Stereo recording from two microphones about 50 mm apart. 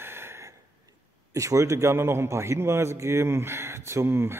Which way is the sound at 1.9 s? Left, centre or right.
Right.